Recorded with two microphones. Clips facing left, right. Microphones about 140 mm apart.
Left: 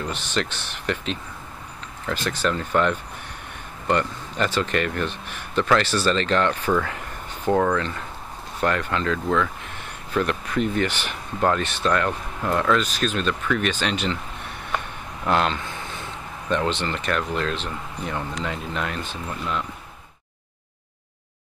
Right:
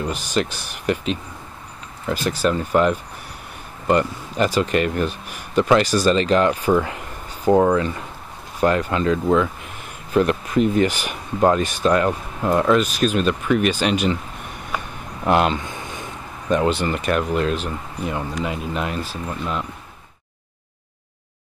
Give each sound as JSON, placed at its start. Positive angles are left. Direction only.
{"t": 0.0, "sound": "speech", "side_deg": -10}
{"t": 10.6, "sound": "speech", "side_deg": -10}
{"t": 14.7, "sound": "a sound", "side_deg": -5}
{"t": 15.2, "sound": "speech", "side_deg": -15}